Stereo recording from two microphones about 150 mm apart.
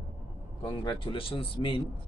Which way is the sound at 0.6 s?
30° left (ahead or behind).